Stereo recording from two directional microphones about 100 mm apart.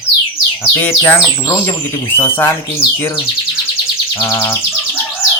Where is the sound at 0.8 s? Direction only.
20° left (ahead or behind).